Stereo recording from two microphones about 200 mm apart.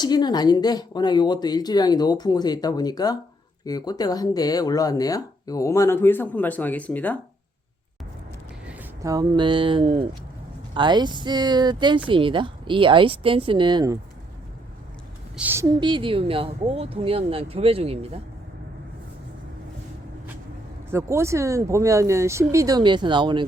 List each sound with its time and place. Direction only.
0.0 s speech: 20° left (ahead or behind)
8.6 s speech: 10° right (ahead or behind)
15.4 s speech: 10° right (ahead or behind); by 18.2 s 30° right (ahead or behind)
20.9 s speech: 15° right (ahead or behind)